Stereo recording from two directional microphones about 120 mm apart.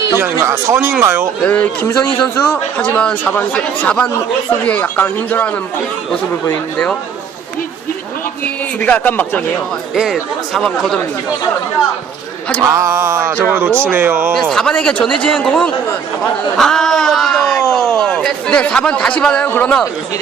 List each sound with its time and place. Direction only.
0.2 s music: 20° right (ahead or behind)
1.4 s speech: 10° left (ahead or behind)
8.8 s speech: 15° left (ahead or behind)
9.9 s speech: centre (ahead or behind)
12.6 s music: 25° right (ahead or behind)
14.3 s speech: 5° left (ahead or behind)